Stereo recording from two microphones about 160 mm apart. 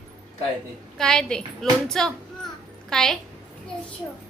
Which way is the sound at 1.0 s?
5° left (ahead or behind).